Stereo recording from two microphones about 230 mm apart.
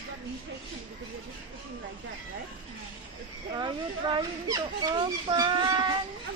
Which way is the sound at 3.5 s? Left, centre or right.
Centre.